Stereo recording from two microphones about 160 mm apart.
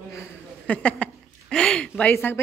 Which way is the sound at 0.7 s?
10° left (ahead or behind).